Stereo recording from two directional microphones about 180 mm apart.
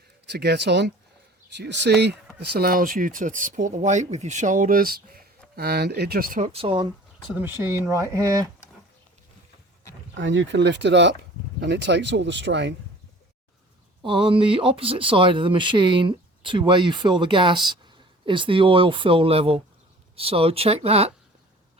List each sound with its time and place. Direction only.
0.3 s speech: 65° right (ahead or behind)
2.4 s speech: 60° right (ahead or behind)
6.5 s speech: 30° right (ahead or behind)
7.3 s speech: 10° right (ahead or behind)
10.2 s speech: 90° right
14.0 s speech: 30° right (ahead or behind)